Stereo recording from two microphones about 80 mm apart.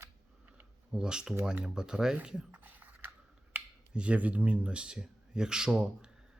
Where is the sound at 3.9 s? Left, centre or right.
Centre.